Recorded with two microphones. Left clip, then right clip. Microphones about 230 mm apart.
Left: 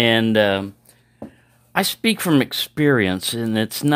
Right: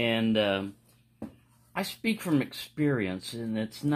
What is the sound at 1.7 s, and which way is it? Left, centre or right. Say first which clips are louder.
Speech: left 12 dB; left.